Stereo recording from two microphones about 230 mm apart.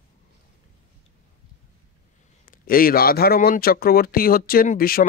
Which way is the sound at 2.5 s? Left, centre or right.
Left.